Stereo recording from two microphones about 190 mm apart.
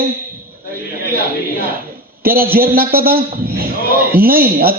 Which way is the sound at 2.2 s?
50° right (ahead or behind).